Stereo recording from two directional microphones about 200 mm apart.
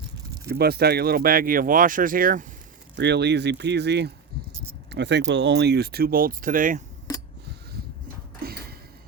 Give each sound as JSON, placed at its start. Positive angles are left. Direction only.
{"t": 0.4, "sound": "speech", "side_deg": -50}
{"t": 2.9, "sound": "speech", "side_deg": -60}